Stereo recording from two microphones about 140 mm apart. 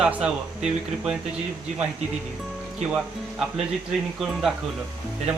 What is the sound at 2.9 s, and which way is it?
Speech, 5° right (ahead or behind).